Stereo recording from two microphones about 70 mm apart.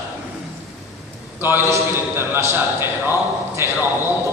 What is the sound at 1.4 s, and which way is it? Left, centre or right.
A man's voice, right.